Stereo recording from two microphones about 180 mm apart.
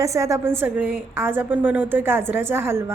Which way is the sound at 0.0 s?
15° right (ahead or behind).